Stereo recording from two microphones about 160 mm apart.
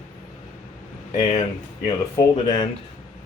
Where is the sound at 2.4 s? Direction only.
25° left (ahead or behind).